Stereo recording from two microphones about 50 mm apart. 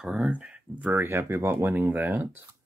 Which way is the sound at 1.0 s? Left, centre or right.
Right.